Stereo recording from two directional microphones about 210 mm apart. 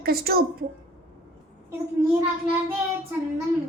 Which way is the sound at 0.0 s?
45° right (ahead or behind).